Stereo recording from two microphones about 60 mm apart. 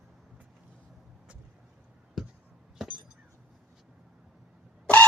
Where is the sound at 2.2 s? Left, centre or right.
Centre.